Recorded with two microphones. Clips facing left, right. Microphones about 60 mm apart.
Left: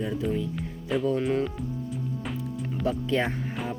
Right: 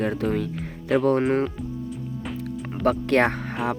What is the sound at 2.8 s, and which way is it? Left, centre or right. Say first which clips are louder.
Speech: right 7 dB; right.